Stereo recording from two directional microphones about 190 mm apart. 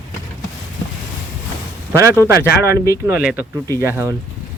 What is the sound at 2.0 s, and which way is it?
Speech, 15° right (ahead or behind).